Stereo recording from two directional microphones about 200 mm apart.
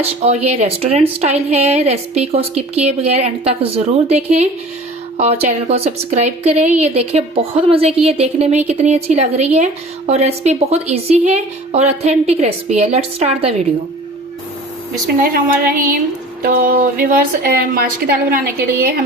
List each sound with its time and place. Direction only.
0.0 s speech: 30° right (ahead or behind)
15.2 s a woman's voice: 45° right (ahead or behind)